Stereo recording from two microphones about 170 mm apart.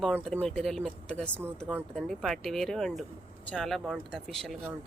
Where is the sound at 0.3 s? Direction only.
5° left (ahead or behind).